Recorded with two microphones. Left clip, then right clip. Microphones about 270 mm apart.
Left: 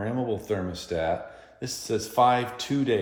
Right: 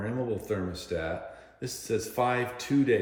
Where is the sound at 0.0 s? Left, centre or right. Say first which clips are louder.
Left 3 dB; centre.